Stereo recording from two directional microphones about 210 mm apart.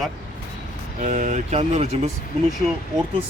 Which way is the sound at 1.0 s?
35° right (ahead or behind).